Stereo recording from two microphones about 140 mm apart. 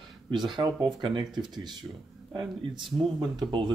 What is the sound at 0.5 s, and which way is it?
Speech, 35° right (ahead or behind).